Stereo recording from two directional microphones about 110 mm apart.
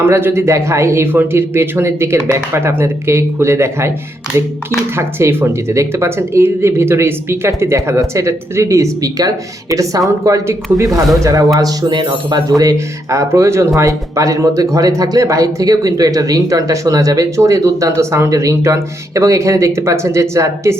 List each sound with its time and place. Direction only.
0.0 s speech: 20° right (ahead or behind)
4.9 s speech: 20° right (ahead or behind)